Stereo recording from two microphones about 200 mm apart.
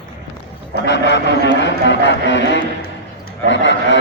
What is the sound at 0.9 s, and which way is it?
Speech, 60° left (ahead or behind).